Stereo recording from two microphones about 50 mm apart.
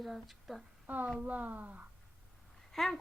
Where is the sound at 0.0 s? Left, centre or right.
Centre.